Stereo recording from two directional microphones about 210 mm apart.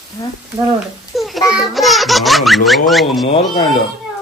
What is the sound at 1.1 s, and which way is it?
A child's voice, centre (ahead or behind).